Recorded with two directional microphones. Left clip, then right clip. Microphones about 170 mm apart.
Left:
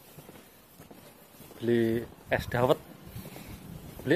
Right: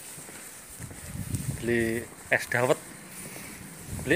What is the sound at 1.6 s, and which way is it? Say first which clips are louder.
Speech: even; 15° left (ahead or behind).